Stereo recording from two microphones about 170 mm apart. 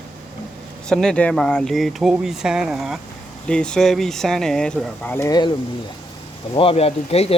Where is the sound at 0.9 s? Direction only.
5° left (ahead or behind); by 5.5 s 20° left (ahead or behind).